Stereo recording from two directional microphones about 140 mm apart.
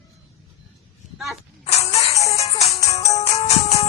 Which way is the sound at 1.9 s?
45° left (ahead or behind).